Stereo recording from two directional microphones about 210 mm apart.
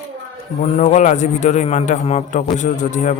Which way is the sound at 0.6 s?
35° left (ahead or behind).